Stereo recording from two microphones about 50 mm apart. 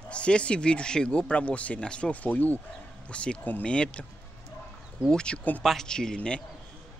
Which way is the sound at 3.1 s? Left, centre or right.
Left.